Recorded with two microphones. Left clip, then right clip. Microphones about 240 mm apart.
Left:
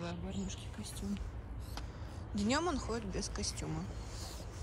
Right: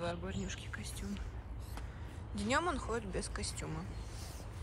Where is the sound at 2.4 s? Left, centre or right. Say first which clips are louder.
Even; centre.